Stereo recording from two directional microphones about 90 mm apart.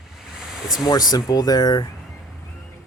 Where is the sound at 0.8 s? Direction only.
45° left (ahead or behind).